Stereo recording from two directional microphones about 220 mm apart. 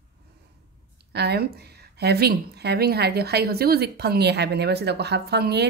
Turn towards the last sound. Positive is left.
turn(degrees=-50)  # may be behind; listen again after turning